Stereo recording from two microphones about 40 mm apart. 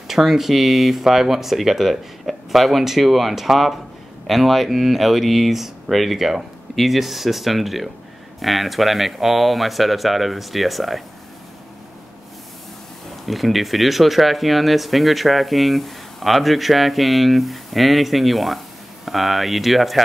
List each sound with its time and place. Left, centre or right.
0.1 s speech: centre
13.2 s speech: centre